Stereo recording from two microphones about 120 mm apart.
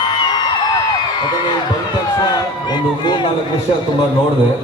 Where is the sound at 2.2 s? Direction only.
35° left (ahead or behind).